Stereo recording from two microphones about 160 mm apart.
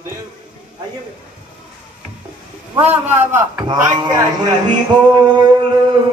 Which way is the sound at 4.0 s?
25° right (ahead or behind).